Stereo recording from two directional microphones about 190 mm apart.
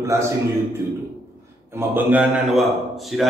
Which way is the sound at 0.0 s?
15° right (ahead or behind).